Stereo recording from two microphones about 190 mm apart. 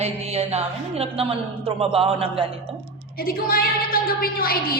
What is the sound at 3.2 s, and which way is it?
A woman's voice, 50° left (ahead or behind).